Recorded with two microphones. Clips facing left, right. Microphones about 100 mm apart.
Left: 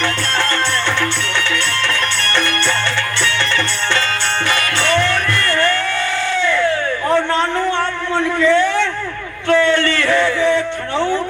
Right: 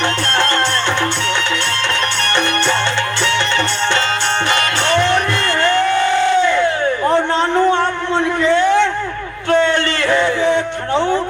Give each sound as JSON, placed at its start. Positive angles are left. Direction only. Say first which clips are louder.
{"t": 4.5, "sound": "music", "louder": "even", "side_deg": -20}
{"t": 6.2, "sound": "crowd", "louder": "right 4 dB", "side_deg": -20}
{"t": 7.1, "sound": "a sound", "louder": "left 1 dB", "side_deg": -20}